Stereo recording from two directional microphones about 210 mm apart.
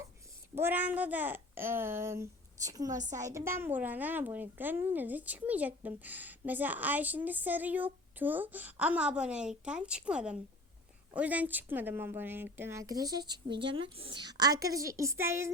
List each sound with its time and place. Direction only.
0.5 s a woman's voice: 10° right (ahead or behind)